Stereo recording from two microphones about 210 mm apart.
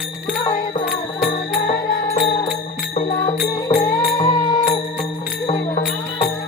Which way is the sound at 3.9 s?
15° left (ahead or behind).